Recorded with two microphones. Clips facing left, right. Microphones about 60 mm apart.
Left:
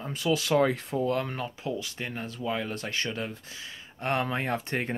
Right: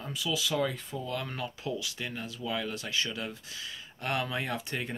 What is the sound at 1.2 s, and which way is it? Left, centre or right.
Speech, left.